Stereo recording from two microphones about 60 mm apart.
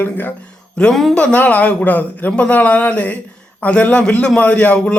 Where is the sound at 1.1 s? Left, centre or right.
Left.